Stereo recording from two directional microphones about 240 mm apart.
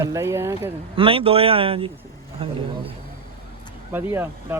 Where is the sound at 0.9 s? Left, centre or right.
Right.